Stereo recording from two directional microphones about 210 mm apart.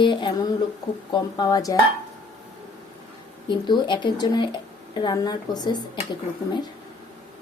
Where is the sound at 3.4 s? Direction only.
20° left (ahead or behind).